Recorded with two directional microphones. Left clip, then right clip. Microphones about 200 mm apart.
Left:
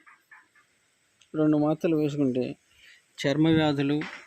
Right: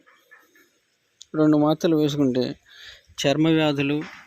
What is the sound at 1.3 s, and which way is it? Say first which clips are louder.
Speech: right 5 dB; 20° right (ahead or behind).